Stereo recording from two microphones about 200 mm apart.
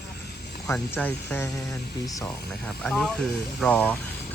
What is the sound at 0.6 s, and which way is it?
Speech, 10° left (ahead or behind).